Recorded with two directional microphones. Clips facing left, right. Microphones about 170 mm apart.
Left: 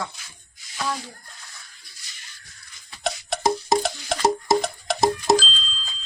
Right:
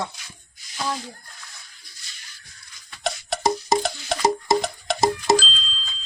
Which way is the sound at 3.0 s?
Centre (ahead or behind).